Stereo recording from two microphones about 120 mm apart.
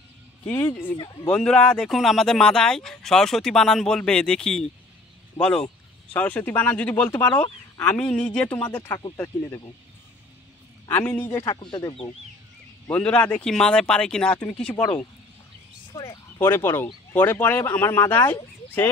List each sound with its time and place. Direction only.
1.3 s speech: 5° left (ahead or behind)
6.1 s speech: 15° left (ahead or behind)
7.8 s speech: 10° left (ahead or behind)
10.9 s speech: 20° left (ahead or behind)
11.4 s speech: 35° left (ahead or behind)
12.8 s speech: 15° left (ahead or behind)
15.9 s speech: 30° left (ahead or behind)